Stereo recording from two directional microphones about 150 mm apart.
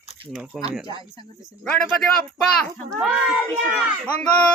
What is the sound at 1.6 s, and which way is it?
Speech, 10° left (ahead or behind).